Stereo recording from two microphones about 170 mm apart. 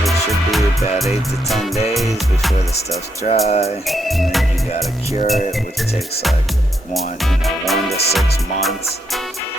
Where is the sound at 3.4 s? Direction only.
40° left (ahead or behind).